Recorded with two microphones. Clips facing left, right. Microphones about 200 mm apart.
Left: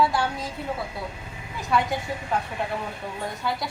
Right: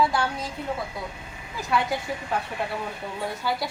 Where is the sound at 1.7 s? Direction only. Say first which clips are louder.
Left 1 dB; centre (ahead or behind).